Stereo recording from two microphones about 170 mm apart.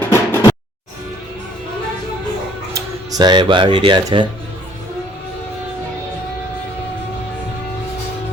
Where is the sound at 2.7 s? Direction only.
20° right (ahead or behind).